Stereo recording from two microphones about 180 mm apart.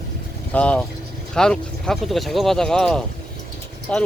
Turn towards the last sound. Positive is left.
turn(degrees=5)  # may be behind; listen again after turning